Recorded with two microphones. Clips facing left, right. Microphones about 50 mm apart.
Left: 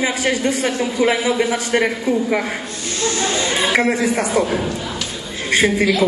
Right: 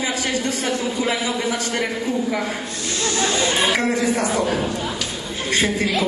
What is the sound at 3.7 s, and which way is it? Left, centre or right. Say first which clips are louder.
Speech: left 3 dB; left.